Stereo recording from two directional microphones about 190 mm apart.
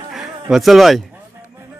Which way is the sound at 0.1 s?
Centre (ahead or behind).